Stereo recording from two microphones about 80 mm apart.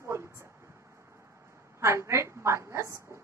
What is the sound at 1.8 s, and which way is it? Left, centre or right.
A woman's voice, right.